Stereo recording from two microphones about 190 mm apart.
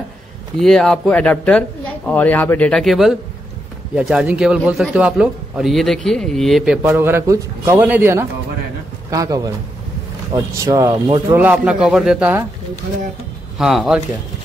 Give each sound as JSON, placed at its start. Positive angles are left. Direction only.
{"t": 0.6, "sound": "a man's voice", "side_deg": 0}
{"t": 13.6, "sound": "a man's voice", "side_deg": 0}